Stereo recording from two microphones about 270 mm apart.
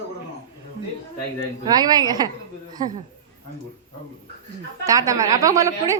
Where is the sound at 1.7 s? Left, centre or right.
Centre.